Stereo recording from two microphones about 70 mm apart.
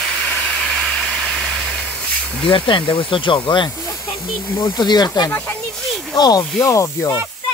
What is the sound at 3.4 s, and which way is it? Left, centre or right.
Speech, left.